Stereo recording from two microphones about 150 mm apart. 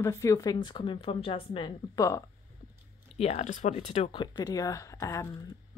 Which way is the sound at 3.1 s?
45° left (ahead or behind).